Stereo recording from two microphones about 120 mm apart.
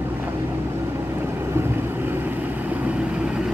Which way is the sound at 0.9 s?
20° right (ahead or behind).